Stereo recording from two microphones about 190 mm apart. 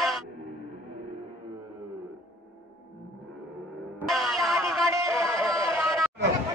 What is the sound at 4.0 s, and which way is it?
Music, centre (ahead or behind).